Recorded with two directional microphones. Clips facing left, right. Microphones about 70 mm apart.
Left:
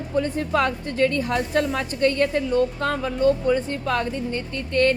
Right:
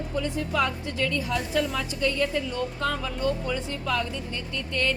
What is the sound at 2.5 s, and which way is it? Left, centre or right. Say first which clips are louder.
Speech: left 7 dB; left.